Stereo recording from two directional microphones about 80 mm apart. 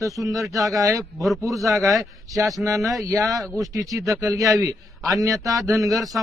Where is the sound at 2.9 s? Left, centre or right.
Right.